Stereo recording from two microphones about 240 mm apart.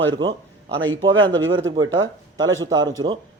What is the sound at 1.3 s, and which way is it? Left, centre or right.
A man's voice, right.